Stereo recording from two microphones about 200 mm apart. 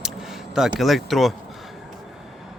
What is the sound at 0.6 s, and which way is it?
Speech, centre (ahead or behind).